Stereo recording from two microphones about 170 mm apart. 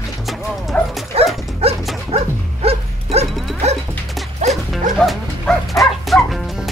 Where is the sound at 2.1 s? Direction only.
35° right (ahead or behind).